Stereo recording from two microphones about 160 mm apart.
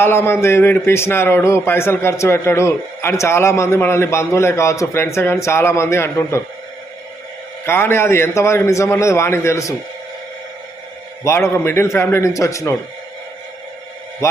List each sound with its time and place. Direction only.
0.0 s a man's voice: 15° left (ahead or behind)
7.6 s a man's voice: 15° left (ahead or behind)
11.2 s a man's voice: 15° left (ahead or behind)